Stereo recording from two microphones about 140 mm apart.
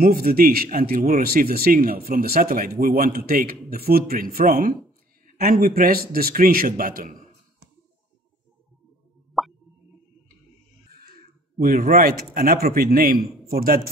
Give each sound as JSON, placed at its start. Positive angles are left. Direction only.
{"t": 0.0, "sound": "speech", "side_deg": -90}
{"t": 9.4, "sound": "plop", "side_deg": 0}
{"t": 11.6, "sound": "speech", "side_deg": -90}